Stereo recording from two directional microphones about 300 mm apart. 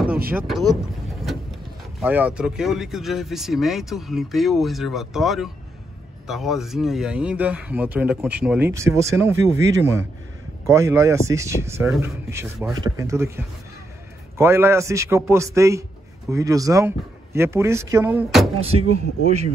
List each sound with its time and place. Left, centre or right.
0.3 s speech: centre
2.0 s speech: centre
14.4 s speech: centre
18.6 s speech: centre